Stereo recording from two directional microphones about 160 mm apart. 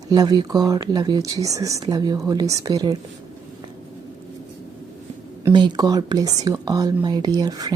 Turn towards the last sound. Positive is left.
turn(degrees=-25)  # may be behind; listen again after turning